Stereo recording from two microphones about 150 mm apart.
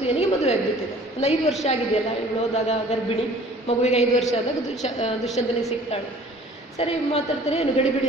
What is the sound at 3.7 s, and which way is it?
A woman's voice, 45° left (ahead or behind).